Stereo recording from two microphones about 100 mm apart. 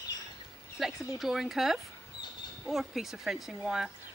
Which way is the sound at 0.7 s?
5° right (ahead or behind).